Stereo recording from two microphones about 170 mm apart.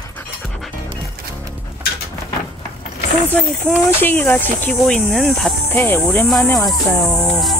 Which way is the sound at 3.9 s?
10° left (ahead or behind).